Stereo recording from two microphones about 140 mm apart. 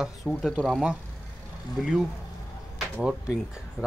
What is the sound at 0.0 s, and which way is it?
Speech, centre (ahead or behind).